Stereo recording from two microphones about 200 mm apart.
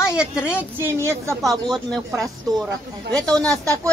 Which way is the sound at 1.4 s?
Centre (ahead or behind).